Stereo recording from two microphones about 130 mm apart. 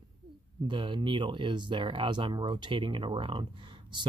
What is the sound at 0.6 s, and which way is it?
Speech, 40° right (ahead or behind).